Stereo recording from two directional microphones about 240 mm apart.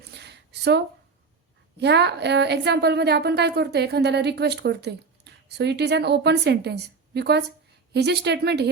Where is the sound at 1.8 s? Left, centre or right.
Right.